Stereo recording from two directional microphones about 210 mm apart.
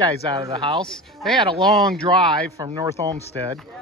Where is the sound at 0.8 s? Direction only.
5° left (ahead or behind).